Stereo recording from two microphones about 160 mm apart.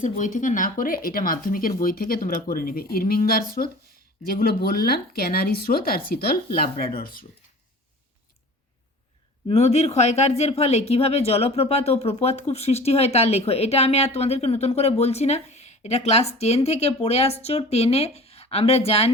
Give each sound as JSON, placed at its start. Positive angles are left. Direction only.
{"t": 0.0, "sound": "speech", "side_deg": 50}
{"t": 9.5, "sound": "speech", "side_deg": 40}